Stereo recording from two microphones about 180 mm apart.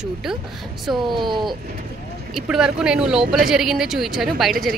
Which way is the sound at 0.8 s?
Centre (ahead or behind).